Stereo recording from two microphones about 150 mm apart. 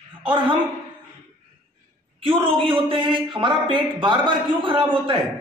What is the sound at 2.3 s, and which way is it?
A man's voice, 35° right (ahead or behind).